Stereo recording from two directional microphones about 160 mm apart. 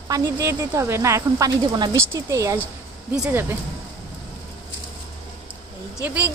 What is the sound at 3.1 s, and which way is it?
Speech, 5° right (ahead or behind).